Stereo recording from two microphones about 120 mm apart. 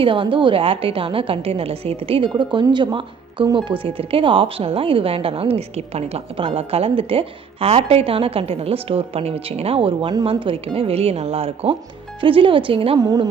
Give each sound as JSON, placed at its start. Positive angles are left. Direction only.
{"t": 0.0, "sound": "a woman's voice", "side_deg": -45}
{"t": 13.0, "sound": "a woman's voice", "side_deg": -35}